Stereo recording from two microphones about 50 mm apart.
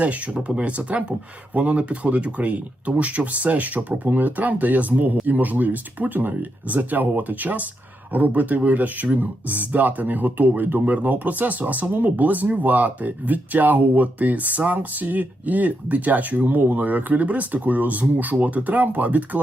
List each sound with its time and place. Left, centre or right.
0.0 s speech: right